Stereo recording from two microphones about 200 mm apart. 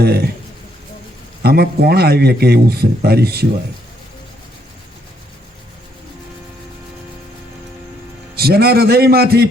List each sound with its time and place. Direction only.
0.0 s a man's voice: 50° right (ahead or behind)
1.4 s a man's voice: 50° right (ahead or behind)
8.4 s a man's voice: 50° right (ahead or behind)